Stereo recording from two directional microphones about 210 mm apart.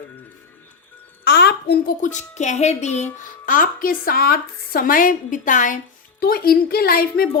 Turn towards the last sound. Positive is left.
turn(degrees=45)  # may be behind; listen again after turning